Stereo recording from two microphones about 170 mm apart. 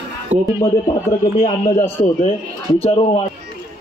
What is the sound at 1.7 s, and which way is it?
Speech, 15° left (ahead or behind).